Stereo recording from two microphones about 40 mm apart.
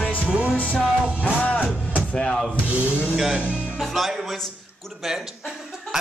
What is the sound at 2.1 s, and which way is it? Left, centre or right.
Rub, centre.